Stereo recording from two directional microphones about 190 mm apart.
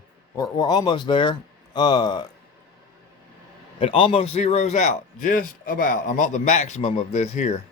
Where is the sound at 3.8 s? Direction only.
30° left (ahead or behind).